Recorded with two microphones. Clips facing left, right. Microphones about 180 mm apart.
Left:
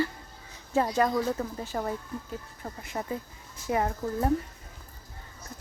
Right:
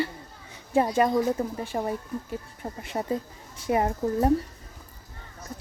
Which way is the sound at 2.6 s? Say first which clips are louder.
Right 4 dB; 30° right (ahead or behind).